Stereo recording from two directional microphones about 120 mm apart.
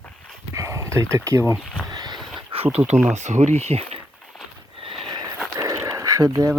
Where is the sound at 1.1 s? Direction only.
25° right (ahead or behind).